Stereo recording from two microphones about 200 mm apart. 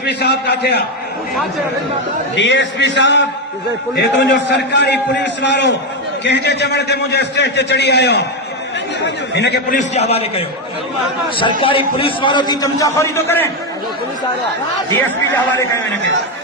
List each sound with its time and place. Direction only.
0.0 s a man's voice: 55° left (ahead or behind)
2.3 s a man's voice: 65° left (ahead or behind)
9.7 s a man's voice: 30° left (ahead or behind)
11.9 s a man's voice: 25° left (ahead or behind)
14.8 s a man's voice: 15° left (ahead or behind)